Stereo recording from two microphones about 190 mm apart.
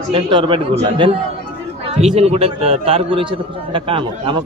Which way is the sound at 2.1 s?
30° right (ahead or behind).